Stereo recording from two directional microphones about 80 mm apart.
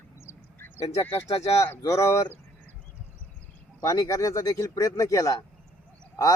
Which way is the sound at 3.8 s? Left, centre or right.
Left.